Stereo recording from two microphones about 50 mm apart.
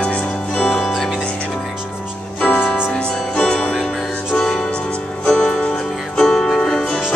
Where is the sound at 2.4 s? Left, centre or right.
Left.